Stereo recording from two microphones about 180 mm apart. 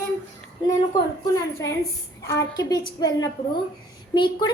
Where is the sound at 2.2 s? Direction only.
15° left (ahead or behind).